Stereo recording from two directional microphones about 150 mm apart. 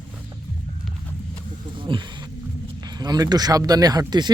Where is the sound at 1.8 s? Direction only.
35° right (ahead or behind).